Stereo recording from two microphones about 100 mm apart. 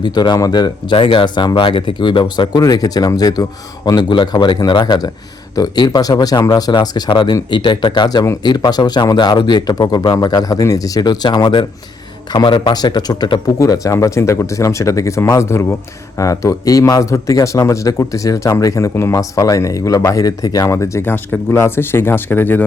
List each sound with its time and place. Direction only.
0.0 s a man's voice: 45° left (ahead or behind); by 22.6 s 20° left (ahead or behind)